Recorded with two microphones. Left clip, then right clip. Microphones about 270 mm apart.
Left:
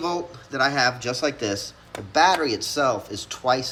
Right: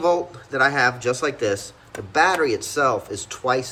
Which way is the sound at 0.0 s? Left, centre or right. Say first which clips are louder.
Right 7 dB; centre.